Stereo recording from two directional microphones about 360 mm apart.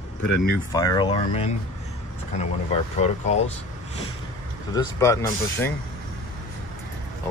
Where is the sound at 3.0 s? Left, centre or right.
Centre.